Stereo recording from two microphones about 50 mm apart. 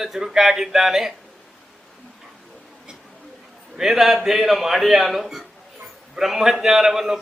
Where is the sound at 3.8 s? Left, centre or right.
Centre.